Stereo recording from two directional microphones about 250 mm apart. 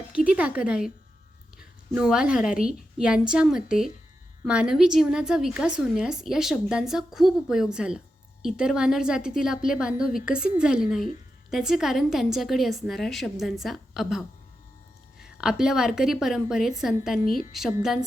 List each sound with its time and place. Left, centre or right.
0.3 s a woman's voice: centre
15.4 s a woman's voice: centre
17.2 s a woman's voice: left
17.5 s a woman's voice: centre